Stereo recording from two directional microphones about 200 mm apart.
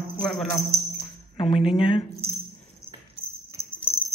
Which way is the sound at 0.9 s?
30° left (ahead or behind).